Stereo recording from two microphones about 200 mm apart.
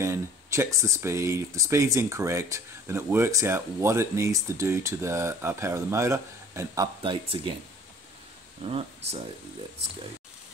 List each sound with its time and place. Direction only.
0.0 s speech: 15° right (ahead or behind)
8.6 s speech: 30° right (ahead or behind)